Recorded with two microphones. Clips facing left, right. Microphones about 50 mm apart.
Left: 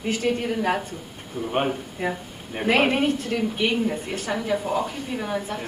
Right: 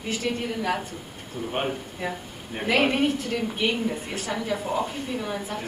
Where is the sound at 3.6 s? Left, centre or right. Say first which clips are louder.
Left 1 dB; centre.